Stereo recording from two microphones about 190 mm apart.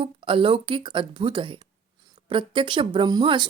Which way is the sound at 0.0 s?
25° right (ahead or behind).